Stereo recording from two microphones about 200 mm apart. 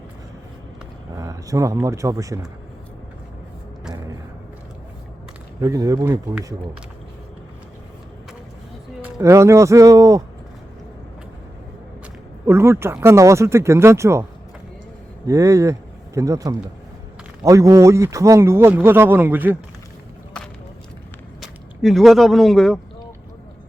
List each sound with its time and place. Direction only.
1.1 s speech: 15° right (ahead or behind)
5.6 s a man's voice: 15° right (ahead or behind)
9.0 s a man's voice: 10° right (ahead or behind)
12.5 s a man's voice: 15° right (ahead or behind)
15.3 s a man's voice: 15° right (ahead or behind)
21.4 s speech: centre (ahead or behind)